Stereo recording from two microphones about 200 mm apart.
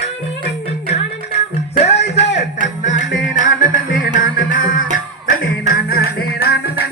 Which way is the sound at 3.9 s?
40° left (ahead or behind).